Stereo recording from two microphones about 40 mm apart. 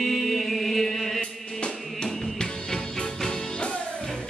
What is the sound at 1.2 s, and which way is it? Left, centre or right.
Music, left.